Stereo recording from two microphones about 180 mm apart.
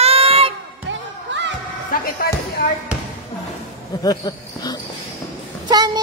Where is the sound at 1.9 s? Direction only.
50° left (ahead or behind).